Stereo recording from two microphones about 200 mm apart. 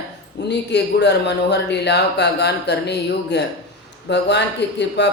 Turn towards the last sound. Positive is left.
turn(degrees=60)  # may be behind; listen again after turning